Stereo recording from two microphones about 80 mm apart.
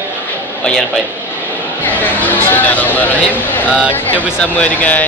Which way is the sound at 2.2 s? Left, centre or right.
Left.